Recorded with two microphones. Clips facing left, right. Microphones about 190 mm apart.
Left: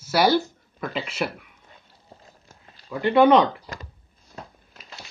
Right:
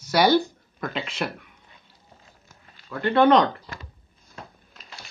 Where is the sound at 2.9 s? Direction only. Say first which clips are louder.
Left 2 dB; 10° left (ahead or behind).